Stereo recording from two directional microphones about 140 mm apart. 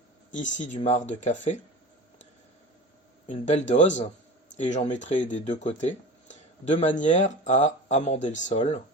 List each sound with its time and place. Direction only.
0.3 s speech: 60° left (ahead or behind)
3.2 s speech: 55° left (ahead or behind)